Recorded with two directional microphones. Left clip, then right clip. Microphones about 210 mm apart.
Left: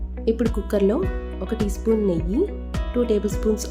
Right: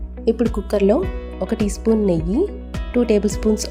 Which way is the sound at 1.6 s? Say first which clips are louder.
Right 2 dB; 30° right (ahead or behind).